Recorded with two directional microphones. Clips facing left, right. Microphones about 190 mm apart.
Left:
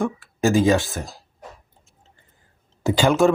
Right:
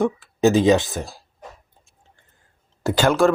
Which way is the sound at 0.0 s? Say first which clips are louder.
Right 4 dB; 20° right (ahead or behind).